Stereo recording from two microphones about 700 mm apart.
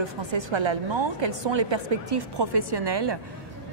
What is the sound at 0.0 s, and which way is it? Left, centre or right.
Speech, right.